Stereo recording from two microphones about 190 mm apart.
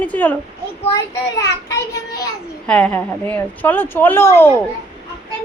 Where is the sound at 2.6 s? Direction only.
5° left (ahead or behind).